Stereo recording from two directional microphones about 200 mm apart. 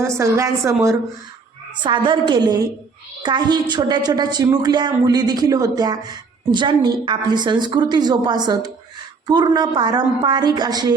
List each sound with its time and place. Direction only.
0.0 s a woman's voice: 15° right (ahead or behind)